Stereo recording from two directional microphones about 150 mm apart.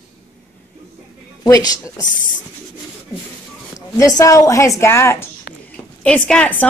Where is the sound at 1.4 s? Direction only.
20° left (ahead or behind).